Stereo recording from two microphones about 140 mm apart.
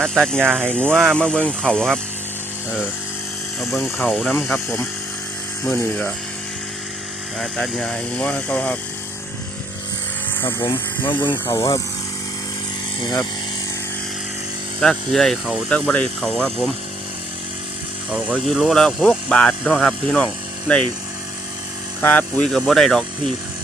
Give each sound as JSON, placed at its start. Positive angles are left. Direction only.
{"t": 0.2, "sound": "speech", "side_deg": 5}
{"t": 0.4, "sound": "speech", "side_deg": -15}
{"t": 0.9, "sound": "speech", "side_deg": 5}
{"t": 3.6, "sound": "speech", "side_deg": 0}
{"t": 4.0, "sound": "speech", "side_deg": 10}
{"t": 7.3, "sound": "speech", "side_deg": 0}
{"t": 10.3, "sound": "speech", "side_deg": 15}
{"t": 10.7, "sound": "speech", "side_deg": 35}
{"t": 14.8, "sound": "speech", "side_deg": 5}
{"t": 15.7, "sound": "speech", "side_deg": 10}
{"t": 18.1, "sound": "speech", "side_deg": -5}
{"t": 22.0, "sound": "speech", "side_deg": 10}